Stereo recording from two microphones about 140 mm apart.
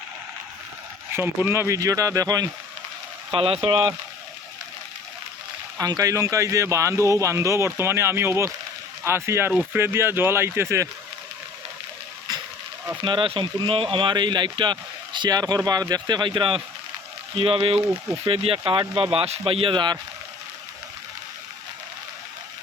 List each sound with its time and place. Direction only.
1.5 s speech: 20° right (ahead or behind)
3.3 s speech: 40° right (ahead or behind)
5.7 s speech: 25° right (ahead or behind)
13.0 s speech: 35° right (ahead or behind)